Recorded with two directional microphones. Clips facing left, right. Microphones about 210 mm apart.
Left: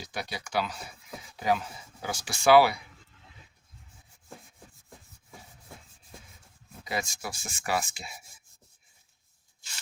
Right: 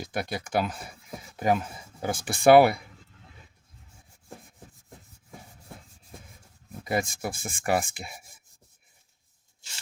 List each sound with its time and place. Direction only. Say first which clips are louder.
0.0 s speech: right 6 dB; 50° right (ahead or behind)
6.8 s speech: right 6 dB; 50° right (ahead or behind)